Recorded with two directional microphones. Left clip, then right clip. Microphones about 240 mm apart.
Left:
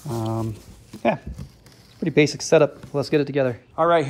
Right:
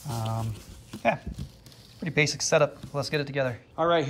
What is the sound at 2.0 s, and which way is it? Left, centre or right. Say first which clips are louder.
Speech: left 6 dB; centre.